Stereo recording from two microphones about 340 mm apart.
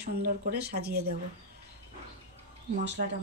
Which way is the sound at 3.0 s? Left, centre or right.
Right.